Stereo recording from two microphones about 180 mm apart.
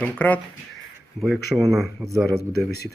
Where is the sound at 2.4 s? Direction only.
60° left (ahead or behind).